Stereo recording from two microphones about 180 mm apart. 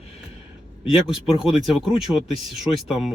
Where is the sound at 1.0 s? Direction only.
Centre (ahead or behind).